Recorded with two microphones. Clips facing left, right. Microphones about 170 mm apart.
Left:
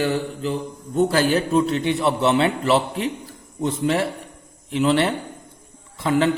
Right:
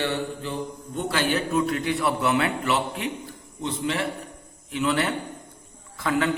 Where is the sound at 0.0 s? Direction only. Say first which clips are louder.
Left 5 dB; 35° left (ahead or behind).